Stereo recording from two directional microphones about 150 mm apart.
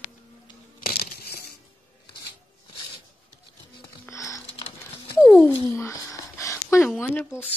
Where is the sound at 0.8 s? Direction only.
75° left (ahead or behind).